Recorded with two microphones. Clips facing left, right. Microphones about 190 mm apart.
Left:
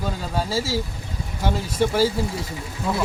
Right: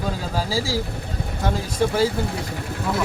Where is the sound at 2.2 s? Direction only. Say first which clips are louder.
Even; 65° right (ahead or behind).